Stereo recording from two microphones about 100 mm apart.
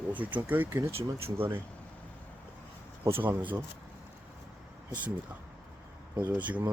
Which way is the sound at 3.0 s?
25° right (ahead or behind).